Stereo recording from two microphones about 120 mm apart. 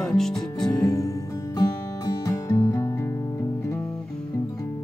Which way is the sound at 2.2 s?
30° left (ahead or behind).